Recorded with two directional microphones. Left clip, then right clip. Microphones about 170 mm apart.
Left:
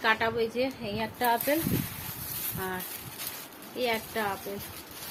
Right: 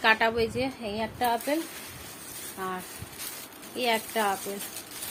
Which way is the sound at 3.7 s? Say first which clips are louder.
Right 3 dB; 30° right (ahead or behind).